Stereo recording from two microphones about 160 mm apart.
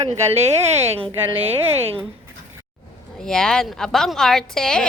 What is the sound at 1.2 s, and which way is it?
Speech, 15° right (ahead or behind).